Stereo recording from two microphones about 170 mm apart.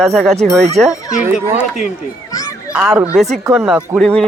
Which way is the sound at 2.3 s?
20° left (ahead or behind).